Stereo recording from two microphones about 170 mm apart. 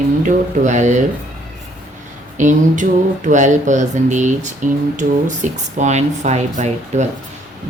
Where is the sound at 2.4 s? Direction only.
50° right (ahead or behind).